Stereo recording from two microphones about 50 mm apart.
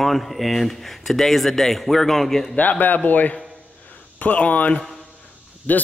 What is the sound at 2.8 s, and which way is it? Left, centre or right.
Speech, left.